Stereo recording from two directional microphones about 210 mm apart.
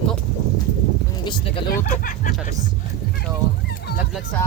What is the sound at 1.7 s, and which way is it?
Speech, 40° left (ahead or behind).